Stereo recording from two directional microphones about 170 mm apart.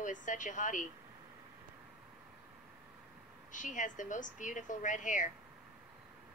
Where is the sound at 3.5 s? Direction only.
50° left (ahead or behind).